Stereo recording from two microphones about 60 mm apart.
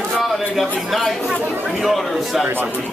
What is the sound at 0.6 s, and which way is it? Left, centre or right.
Speech, centre.